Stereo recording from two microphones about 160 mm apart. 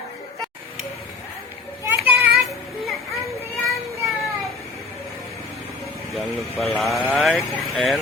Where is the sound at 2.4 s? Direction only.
Centre (ahead or behind).